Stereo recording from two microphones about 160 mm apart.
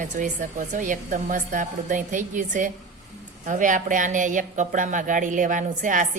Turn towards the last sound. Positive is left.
turn(degrees=-55)  # may be behind; listen again after turning